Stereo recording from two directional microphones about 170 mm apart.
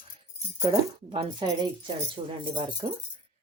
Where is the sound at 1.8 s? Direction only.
30° right (ahead or behind).